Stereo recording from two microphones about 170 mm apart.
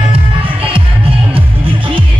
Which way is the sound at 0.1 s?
35° right (ahead or behind).